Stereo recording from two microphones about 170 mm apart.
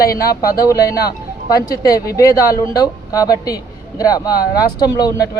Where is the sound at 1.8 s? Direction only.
20° left (ahead or behind).